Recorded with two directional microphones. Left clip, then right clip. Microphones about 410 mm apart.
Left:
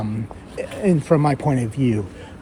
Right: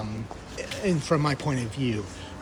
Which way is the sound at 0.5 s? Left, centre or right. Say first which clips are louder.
Left 7 dB; left.